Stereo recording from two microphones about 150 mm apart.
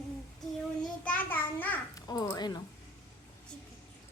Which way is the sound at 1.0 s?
10° left (ahead or behind).